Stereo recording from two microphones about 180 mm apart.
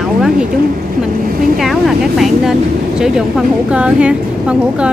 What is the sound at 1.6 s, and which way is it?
A woman's voice, centre (ahead or behind).